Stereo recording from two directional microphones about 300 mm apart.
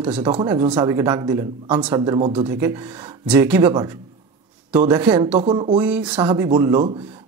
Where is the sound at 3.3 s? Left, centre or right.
Centre.